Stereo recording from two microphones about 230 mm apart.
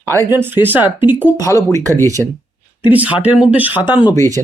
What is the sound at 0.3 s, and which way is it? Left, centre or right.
Speech, centre.